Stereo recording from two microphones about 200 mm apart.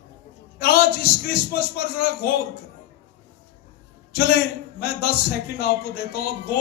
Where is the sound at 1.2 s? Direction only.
50° left (ahead or behind).